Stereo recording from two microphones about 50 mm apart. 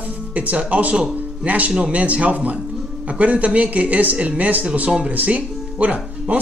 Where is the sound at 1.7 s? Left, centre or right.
Right.